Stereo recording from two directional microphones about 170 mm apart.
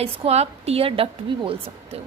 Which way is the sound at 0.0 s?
35° right (ahead or behind).